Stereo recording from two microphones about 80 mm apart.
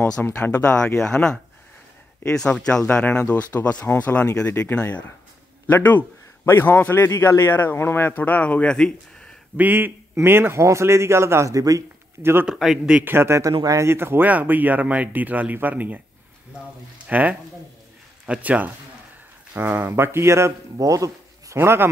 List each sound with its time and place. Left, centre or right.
0.0 s a man's voice: left
9.6 s a man's voice: right
12.2 s a man's voice: right
12.4 s a man's voice: centre
13.0 s a man's voice: right
17.1 s a man's voice: right
20.8 s a sound: right
21.5 s speech: right